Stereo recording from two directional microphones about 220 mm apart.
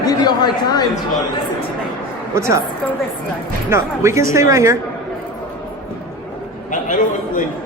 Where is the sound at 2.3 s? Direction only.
15° right (ahead or behind).